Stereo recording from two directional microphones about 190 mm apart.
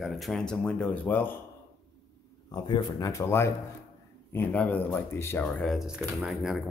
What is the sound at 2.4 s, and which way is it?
A man's voice, 20° left (ahead or behind).